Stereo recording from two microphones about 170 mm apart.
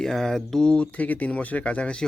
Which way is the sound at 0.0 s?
Centre (ahead or behind).